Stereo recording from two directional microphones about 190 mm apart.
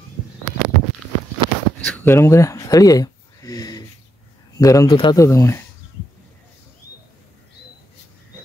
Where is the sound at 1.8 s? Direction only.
10° left (ahead or behind).